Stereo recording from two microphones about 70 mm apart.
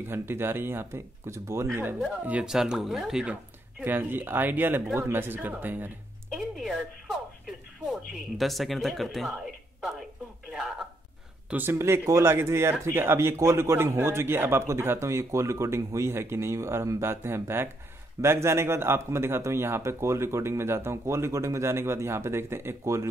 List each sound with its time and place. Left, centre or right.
0.0 s speech: right
2.4 s speech: centre
3.8 s speech: right
6.3 s a sound: centre
7.8 s speech: centre
10.5 s a sound: centre
11.7 s speech: right